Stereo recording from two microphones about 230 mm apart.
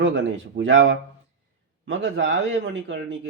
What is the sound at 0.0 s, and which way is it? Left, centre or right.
Speech, right.